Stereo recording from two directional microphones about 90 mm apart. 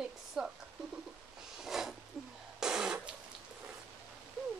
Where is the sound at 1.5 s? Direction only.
5° right (ahead or behind).